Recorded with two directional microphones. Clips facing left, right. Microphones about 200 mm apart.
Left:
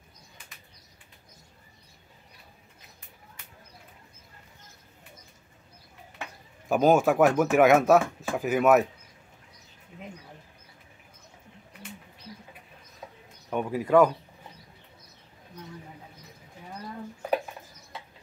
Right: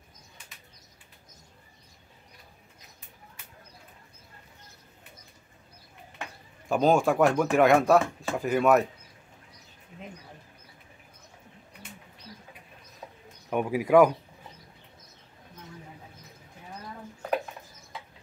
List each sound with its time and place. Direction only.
6.7 s speech: 5° left (ahead or behind)
13.5 s speech: 10° right (ahead or behind)